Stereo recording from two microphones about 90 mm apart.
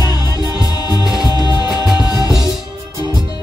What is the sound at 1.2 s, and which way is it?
Music, 50° left (ahead or behind).